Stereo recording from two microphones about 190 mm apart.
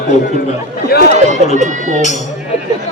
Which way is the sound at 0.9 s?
55° left (ahead or behind).